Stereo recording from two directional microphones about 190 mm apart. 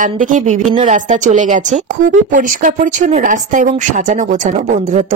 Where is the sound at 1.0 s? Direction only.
40° right (ahead or behind).